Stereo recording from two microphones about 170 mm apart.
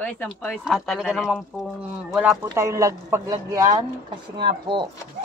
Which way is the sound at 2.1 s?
10° right (ahead or behind).